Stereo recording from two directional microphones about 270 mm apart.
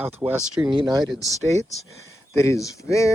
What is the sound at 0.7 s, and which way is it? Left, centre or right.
Speech, centre.